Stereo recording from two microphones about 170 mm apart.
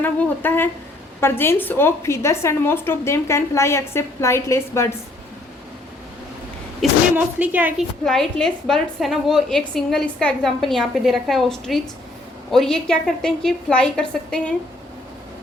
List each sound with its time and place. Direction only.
0.0 s a woman's voice: 10° left (ahead or behind)
6.8 s a woman's voice: centre (ahead or behind)
7.3 s a woman's voice: 10° right (ahead or behind)
8.0 s a woman's voice: 5° left (ahead or behind)